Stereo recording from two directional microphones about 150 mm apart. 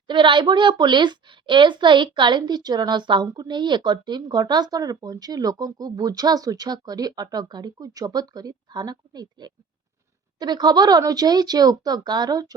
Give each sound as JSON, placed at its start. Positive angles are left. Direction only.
{"t": 0.1, "sound": "a woman's voice", "side_deg": -30}